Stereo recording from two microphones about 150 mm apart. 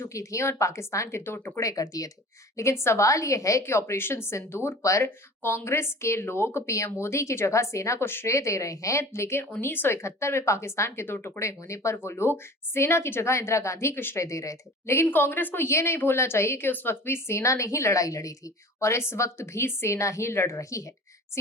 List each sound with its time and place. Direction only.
0.0 s a woman's voice: 20° left (ahead or behind)